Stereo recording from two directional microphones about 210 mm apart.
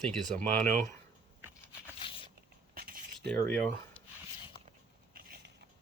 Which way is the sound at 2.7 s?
45° right (ahead or behind).